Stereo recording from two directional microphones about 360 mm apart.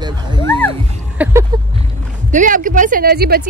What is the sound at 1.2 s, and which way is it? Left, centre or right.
Speech, centre.